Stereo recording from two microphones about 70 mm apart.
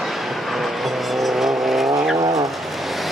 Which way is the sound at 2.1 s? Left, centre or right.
Right.